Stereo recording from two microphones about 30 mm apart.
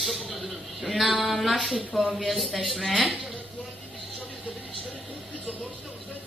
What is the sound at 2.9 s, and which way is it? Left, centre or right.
Speech, centre.